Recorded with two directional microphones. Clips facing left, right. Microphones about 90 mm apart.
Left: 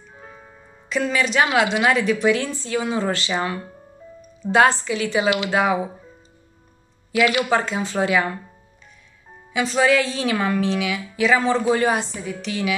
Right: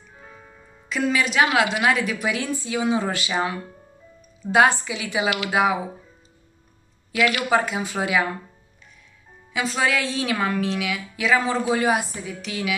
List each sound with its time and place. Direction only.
0.8 s a woman's voice: 5° right (ahead or behind)
7.2 s speech: 20° left (ahead or behind)
7.4 s speech: 10° right (ahead or behind)
9.5 s a woman's voice: centre (ahead or behind)